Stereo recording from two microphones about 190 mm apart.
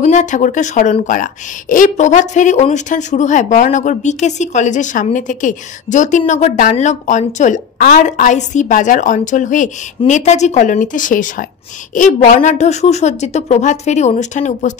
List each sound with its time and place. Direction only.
0.0 s a woman's voice: 40° left (ahead or behind)